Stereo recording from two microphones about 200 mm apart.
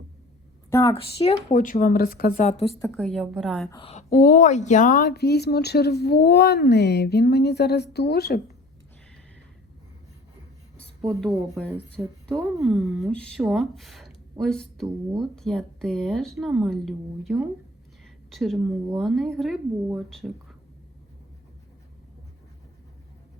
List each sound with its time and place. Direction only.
0.7 s a woman's voice: 15° left (ahead or behind)
1.2 s speech: 30° left (ahead or behind)
2.7 s speech: 10° left (ahead or behind)
3.7 s a woman's voice: 25° left (ahead or behind); by 8.4 s 55° left (ahead or behind)
11.0 s speech: centre (ahead or behind)
18.0 s a sound: centre (ahead or behind)
18.9 s speech: centre (ahead or behind)